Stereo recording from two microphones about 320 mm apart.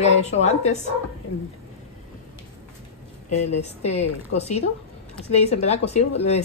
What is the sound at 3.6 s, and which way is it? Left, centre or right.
A man's voice, centre.